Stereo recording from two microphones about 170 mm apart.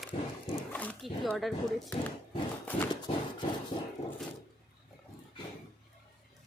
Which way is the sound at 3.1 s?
35° left (ahead or behind).